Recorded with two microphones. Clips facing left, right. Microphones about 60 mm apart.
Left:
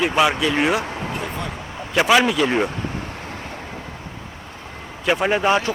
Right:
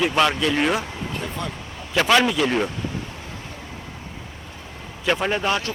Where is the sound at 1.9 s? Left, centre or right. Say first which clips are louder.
Left 2 dB; centre.